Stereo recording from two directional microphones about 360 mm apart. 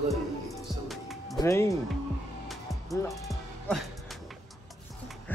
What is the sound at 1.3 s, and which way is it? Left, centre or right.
Speech, centre.